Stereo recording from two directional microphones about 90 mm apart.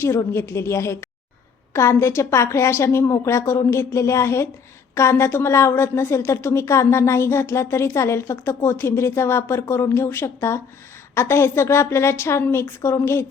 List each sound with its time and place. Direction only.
0.0 s a woman's voice: 30° left (ahead or behind)